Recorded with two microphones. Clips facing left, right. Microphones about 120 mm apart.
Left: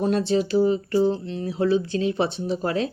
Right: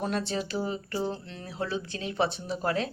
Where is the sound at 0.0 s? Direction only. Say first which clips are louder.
Left 9 dB; 40° left (ahead or behind).